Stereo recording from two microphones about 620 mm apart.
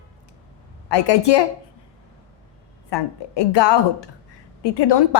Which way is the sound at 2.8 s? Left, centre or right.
Left.